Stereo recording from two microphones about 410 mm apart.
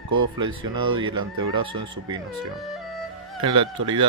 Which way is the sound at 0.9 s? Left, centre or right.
Centre.